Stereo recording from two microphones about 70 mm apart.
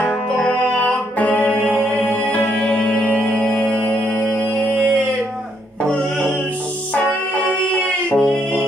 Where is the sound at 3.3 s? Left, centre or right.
Centre.